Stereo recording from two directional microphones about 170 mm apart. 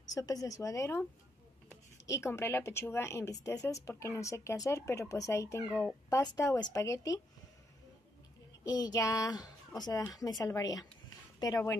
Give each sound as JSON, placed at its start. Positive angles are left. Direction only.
{"t": 0.1, "sound": "a woman's voice", "side_deg": 20}
{"t": 2.0, "sound": "a woman's voice", "side_deg": 15}
{"t": 8.6, "sound": "a woman's voice", "side_deg": 20}